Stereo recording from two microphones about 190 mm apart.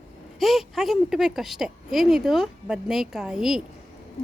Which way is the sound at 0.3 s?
Centre (ahead or behind).